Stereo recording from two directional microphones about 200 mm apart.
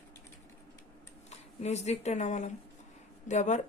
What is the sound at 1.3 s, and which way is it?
A woman's voice, 35° left (ahead or behind).